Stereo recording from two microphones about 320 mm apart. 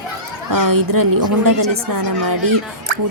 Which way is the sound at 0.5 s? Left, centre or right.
Right.